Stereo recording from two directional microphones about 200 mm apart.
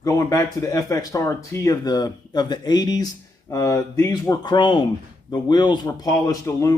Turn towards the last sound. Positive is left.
turn(degrees=15)  # may be behind; listen again after turning